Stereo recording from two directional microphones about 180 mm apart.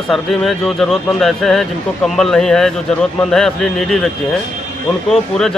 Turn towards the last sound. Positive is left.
turn(degrees=0)  # may be behind; listen again after turning